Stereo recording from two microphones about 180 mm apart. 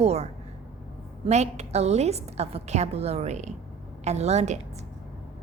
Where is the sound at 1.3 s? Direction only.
40° right (ahead or behind).